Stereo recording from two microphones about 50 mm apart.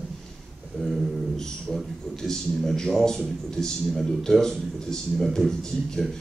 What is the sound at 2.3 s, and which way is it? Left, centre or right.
A man's voice, centre.